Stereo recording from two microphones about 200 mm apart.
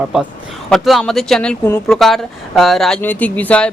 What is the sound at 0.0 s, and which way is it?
Speech, 5° right (ahead or behind).